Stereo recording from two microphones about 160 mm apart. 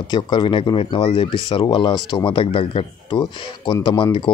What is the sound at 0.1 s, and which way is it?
Speech, 25° left (ahead or behind).